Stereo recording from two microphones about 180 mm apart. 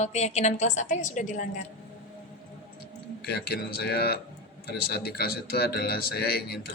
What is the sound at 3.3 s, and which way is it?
A man's voice, 60° left (ahead or behind).